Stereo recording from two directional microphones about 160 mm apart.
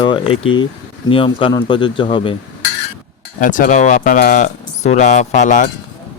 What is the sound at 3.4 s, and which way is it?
A man's voice, 55° left (ahead or behind).